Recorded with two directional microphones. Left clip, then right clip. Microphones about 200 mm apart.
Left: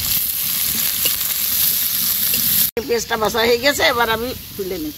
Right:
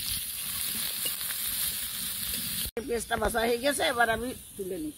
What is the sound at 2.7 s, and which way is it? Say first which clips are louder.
Speech: left 10 dB; 30° right (ahead or behind).